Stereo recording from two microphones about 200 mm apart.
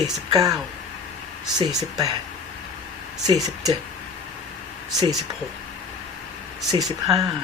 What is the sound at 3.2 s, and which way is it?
Speech, 20° right (ahead or behind).